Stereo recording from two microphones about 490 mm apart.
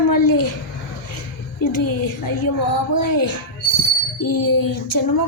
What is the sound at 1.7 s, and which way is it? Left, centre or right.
Speech, left.